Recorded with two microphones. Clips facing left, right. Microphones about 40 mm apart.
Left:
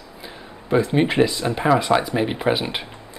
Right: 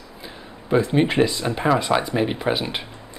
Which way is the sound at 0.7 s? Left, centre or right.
Centre.